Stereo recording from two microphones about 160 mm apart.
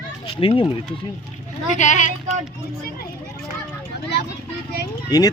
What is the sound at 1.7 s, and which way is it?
Speech, 50° left (ahead or behind).